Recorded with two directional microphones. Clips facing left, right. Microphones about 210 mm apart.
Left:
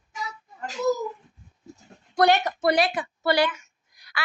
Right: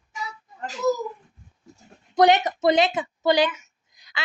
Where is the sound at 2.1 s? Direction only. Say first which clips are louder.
Right 3 dB; 20° right (ahead or behind).